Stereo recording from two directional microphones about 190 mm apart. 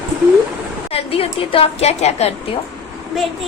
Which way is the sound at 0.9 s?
30° left (ahead or behind).